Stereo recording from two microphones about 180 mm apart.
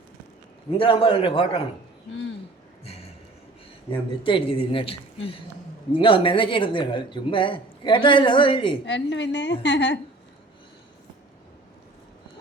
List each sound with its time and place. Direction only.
0.7 s a man's voice: 30° left (ahead or behind)
4.2 s speech: 30° left (ahead or behind)
8.9 s a woman's voice: 85° left